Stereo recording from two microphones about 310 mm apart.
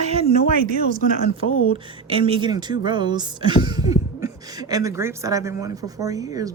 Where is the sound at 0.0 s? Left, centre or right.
Centre.